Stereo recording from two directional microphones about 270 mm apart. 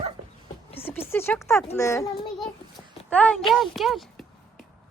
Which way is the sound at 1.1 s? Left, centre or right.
Centre.